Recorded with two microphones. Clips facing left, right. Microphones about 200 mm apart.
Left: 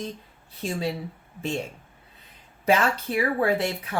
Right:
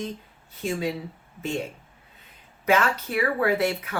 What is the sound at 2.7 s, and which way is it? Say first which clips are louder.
Speech: even; 30° left (ahead or behind).